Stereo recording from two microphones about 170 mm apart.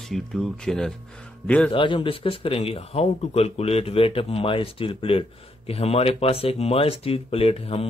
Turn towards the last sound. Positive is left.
turn(degrees=35)  # may be behind; listen again after turning